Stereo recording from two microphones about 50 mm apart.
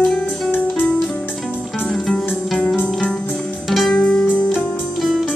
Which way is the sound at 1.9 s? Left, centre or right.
Centre.